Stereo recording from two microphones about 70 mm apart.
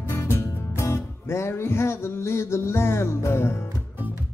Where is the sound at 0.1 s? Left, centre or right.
Left.